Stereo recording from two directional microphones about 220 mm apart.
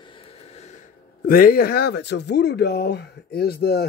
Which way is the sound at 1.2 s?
40° left (ahead or behind).